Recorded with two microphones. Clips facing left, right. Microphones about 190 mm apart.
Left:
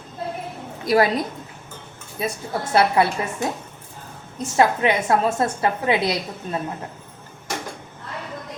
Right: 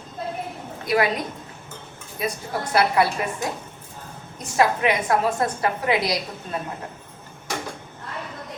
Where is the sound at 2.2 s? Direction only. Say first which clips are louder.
Left 1 dB; 25° left (ahead or behind).